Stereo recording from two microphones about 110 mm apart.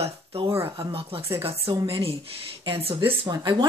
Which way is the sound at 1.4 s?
60° right (ahead or behind).